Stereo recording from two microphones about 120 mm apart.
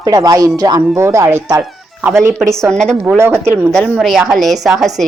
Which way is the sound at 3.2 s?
20° right (ahead or behind).